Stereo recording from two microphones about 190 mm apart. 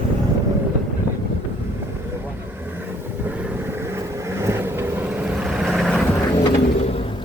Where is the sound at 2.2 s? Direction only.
10° right (ahead or behind).